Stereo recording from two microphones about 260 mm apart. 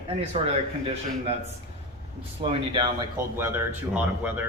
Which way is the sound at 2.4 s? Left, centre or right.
Right.